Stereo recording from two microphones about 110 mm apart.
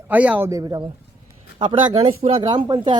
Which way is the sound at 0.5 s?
35° right (ahead or behind).